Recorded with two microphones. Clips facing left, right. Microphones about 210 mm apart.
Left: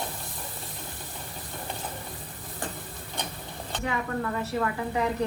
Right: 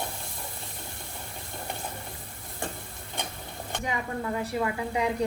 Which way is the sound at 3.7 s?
15° right (ahead or behind).